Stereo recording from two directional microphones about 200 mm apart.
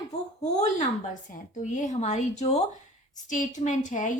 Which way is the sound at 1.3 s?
40° left (ahead or behind).